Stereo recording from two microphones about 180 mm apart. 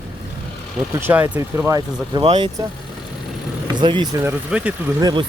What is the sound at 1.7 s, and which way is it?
Speech, 25° right (ahead or behind).